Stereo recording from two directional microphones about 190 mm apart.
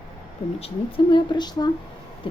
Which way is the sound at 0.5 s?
30° left (ahead or behind).